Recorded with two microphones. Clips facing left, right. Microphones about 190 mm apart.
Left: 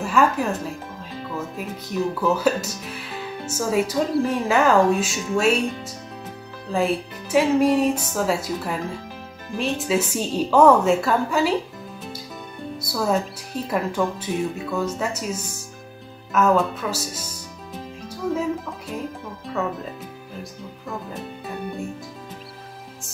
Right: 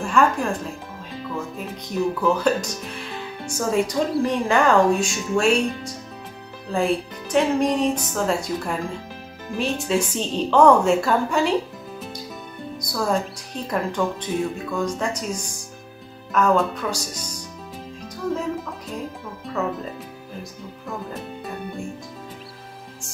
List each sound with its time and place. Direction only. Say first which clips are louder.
0.0 s speech: even; 5° left (ahead or behind)
2.2 s speech: even; 5° left (ahead or behind)
12.8 s speech: left 1 dB; 5° left (ahead or behind)
18.3 s speech: left 2 dB; 5° left (ahead or behind)